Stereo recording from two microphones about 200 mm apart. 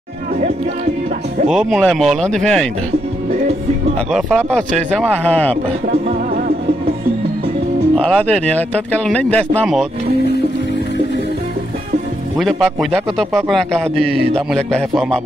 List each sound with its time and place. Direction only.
1.5 s speech: centre (ahead or behind)
4.1 s speech: 5° left (ahead or behind)
5.9 s music: 45° right (ahead or behind)
7.9 s speech: 5° left (ahead or behind)
12.4 s speech: centre (ahead or behind)